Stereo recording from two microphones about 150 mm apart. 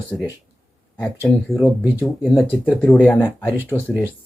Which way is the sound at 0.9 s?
15° left (ahead or behind).